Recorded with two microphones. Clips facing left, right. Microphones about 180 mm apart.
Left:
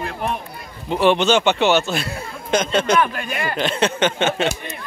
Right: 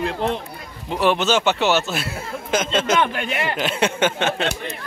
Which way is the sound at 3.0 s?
25° right (ahead or behind).